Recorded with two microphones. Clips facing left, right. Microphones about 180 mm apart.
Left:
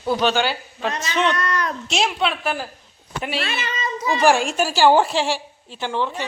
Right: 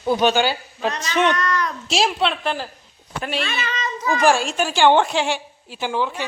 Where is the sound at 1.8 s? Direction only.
Centre (ahead or behind).